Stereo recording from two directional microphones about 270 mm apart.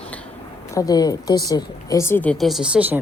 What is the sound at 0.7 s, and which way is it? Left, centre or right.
Speech, centre.